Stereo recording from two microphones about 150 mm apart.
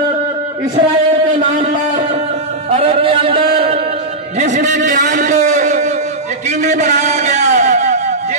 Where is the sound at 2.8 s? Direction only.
40° right (ahead or behind).